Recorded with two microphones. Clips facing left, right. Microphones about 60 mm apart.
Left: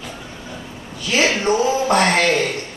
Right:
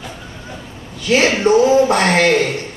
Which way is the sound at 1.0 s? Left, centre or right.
Right.